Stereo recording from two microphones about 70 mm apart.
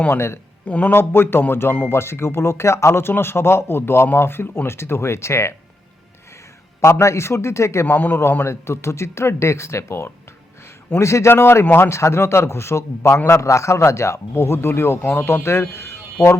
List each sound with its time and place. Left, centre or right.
0.6 s a man's voice: left
0.9 s speech: left
6.8 s speech: left
7.9 s a man's voice: left
8.4 s speech: left